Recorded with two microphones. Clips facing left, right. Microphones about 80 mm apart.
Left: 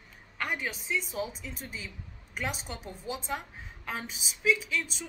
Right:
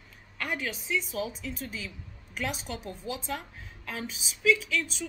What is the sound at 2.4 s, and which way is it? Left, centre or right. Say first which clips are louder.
Speech: right 2 dB; left.